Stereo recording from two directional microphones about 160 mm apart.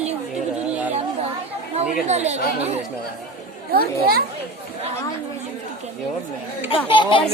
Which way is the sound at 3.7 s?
70° right (ahead or behind).